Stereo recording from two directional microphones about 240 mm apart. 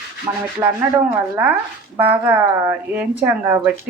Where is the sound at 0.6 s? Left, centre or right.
Centre.